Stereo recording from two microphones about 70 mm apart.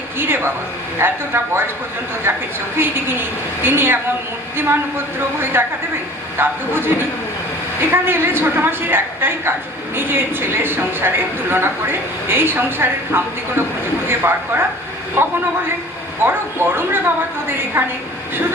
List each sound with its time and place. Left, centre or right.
0.2 s a woman's voice: right
5.5 s a woman's voice: right
16.2 s a woman's voice: right